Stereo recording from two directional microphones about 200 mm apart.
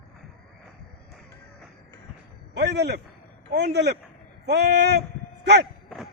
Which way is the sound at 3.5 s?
55° right (ahead or behind).